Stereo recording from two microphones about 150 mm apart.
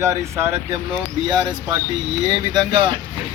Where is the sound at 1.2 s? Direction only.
30° right (ahead or behind).